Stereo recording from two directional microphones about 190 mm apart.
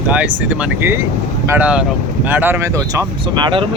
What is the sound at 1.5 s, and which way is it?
Speech, 10° right (ahead or behind).